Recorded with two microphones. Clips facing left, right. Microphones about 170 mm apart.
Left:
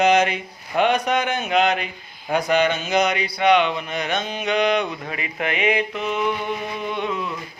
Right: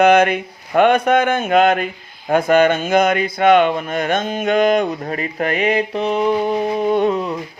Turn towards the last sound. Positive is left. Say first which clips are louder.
# right 9 dB
turn(degrees=-40)  # may be behind; listen again after turning